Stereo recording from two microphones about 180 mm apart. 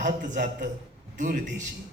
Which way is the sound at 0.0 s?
45° right (ahead or behind).